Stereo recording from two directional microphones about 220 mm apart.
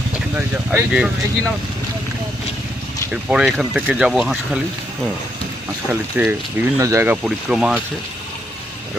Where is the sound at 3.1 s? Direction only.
5° right (ahead or behind).